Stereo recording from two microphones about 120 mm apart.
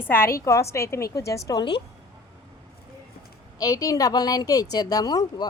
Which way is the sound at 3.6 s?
30° left (ahead or behind).